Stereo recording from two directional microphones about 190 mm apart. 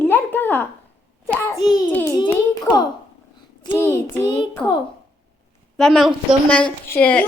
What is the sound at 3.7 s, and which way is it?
Child singing, 10° left (ahead or behind).